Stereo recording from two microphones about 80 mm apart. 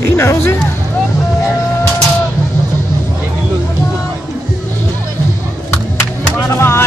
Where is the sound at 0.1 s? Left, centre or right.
Left.